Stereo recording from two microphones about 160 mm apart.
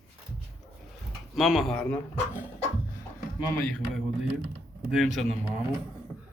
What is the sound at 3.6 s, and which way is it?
A man's voice, 5° left (ahead or behind).